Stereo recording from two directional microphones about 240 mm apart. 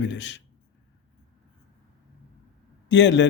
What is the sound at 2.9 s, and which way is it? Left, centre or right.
Speech, left.